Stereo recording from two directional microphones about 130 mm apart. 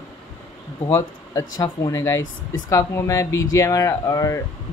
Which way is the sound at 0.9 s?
30° left (ahead or behind).